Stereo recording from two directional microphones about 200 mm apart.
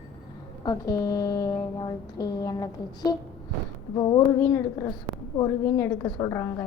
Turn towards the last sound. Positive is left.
turn(degrees=15)  # may be behind; listen again after turning